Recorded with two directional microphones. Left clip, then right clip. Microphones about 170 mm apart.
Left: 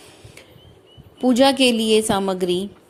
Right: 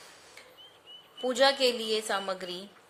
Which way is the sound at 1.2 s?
35° left (ahead or behind).